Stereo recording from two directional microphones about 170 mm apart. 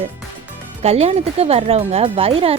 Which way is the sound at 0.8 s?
40° right (ahead or behind).